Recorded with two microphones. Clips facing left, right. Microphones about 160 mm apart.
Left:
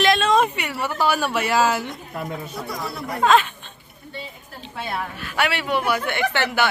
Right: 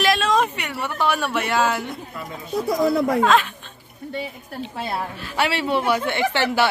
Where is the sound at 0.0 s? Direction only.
Centre (ahead or behind).